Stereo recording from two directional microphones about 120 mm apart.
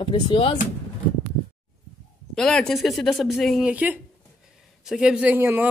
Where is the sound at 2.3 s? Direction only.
5° left (ahead or behind).